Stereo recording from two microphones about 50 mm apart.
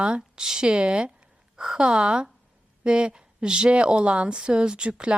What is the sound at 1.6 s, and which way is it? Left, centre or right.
Speech, centre.